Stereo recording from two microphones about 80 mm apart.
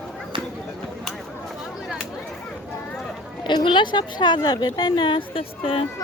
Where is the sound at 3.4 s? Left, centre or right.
Left.